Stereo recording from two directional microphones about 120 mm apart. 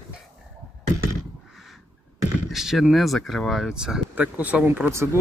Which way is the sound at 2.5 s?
Centre (ahead or behind).